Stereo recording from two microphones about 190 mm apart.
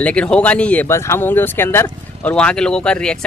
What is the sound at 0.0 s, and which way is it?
Speech, 5° left (ahead or behind).